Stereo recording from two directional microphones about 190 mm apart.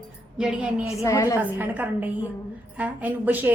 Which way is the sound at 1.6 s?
10° right (ahead or behind).